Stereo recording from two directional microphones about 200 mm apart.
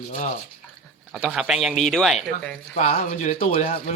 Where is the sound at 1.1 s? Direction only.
Centre (ahead or behind).